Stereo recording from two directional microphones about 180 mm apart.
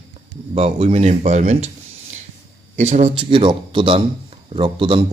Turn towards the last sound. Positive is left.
turn(degrees=-30)  # may be behind; listen again after turning